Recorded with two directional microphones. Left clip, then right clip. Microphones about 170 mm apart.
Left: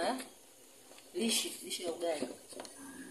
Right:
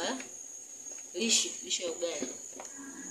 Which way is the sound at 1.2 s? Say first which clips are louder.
Right 5 dB; 15° left (ahead or behind).